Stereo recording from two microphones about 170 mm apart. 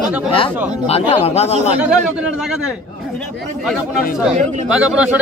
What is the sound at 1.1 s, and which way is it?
Speech, 40° left (ahead or behind).